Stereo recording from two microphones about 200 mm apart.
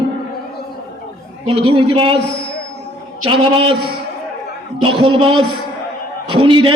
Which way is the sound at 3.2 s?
30° right (ahead or behind).